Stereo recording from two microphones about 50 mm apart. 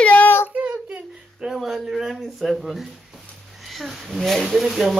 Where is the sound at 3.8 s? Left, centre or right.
Centre.